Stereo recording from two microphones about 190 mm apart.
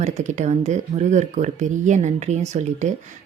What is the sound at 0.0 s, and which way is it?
A woman's voice, 40° right (ahead or behind).